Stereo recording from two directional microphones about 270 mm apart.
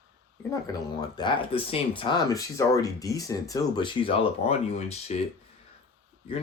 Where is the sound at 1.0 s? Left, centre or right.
Centre.